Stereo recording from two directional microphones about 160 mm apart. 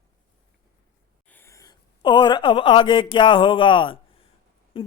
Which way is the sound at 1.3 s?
15° left (ahead or behind).